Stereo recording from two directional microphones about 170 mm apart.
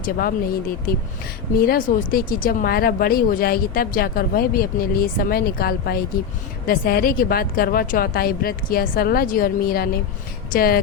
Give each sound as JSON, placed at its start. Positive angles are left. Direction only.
{"t": 0.0, "sound": "speech", "side_deg": 60}
{"t": 1.6, "sound": "speech", "side_deg": 60}